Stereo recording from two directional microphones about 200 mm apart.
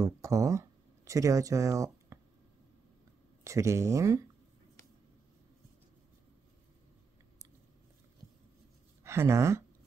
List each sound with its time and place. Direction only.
0.0 s speech: 15° right (ahead or behind)
3.4 s speech: 15° right (ahead or behind)
9.0 s speech: 15° right (ahead or behind)